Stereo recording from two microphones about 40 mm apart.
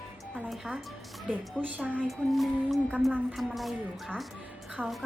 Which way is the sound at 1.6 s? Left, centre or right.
Right.